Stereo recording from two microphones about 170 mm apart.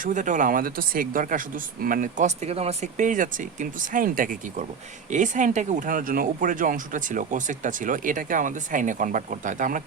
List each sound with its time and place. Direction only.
0.0 s speech: 45° right (ahead or behind)